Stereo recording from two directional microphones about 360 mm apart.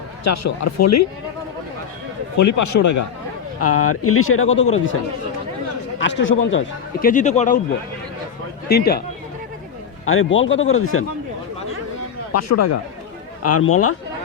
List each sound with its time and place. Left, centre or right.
0.3 s speech: left
2.4 s speech: left
3.6 s speech: left
6.0 s speech: left
7.0 s a man's voice: left
8.7 s a man's voice: left
10.1 s speech: left
12.3 s speech: left